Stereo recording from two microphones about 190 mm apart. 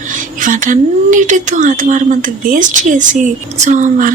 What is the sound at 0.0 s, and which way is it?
Speech, 45° right (ahead or behind).